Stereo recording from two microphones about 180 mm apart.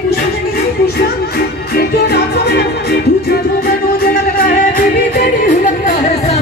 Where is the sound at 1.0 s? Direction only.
60° left (ahead or behind).